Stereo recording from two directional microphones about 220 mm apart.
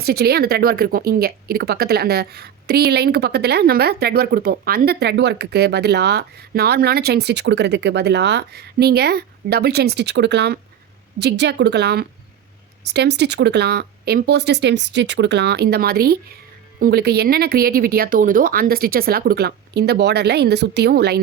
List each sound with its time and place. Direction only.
0.0 s a woman's voice: 45° right (ahead or behind)